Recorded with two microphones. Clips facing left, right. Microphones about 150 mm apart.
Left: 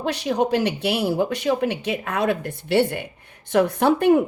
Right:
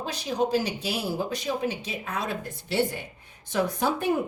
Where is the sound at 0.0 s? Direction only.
70° left (ahead or behind).